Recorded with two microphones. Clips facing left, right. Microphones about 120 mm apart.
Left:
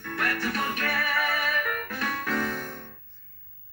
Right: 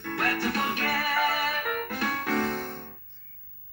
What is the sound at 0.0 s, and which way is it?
Music, 25° right (ahead or behind).